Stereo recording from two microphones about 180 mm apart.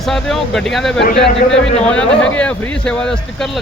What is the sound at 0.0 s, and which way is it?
A man's voice, centre (ahead or behind).